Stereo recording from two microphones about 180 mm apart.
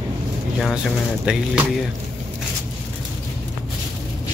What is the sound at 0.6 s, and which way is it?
Speech, centre (ahead or behind).